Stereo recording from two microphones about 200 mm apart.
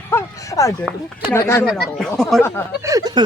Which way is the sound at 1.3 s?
15° left (ahead or behind).